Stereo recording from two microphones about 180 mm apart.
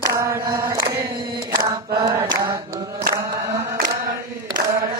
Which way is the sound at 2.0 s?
20° right (ahead or behind).